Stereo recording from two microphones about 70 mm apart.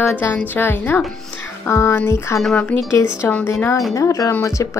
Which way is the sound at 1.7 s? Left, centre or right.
Left.